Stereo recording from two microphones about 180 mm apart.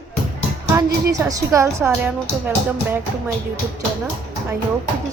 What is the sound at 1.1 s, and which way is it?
A woman's voice, 20° right (ahead or behind).